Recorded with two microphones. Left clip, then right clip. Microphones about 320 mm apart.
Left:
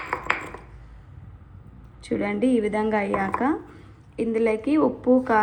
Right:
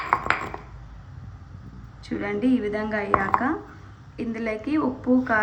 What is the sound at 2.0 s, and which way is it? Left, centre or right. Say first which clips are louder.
A woman's voice: left 2 dB; centre.